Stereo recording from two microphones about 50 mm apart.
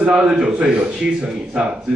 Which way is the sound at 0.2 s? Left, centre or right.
Centre.